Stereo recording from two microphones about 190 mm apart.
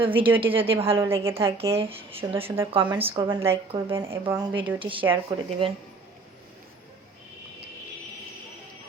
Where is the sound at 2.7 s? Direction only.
25° right (ahead or behind).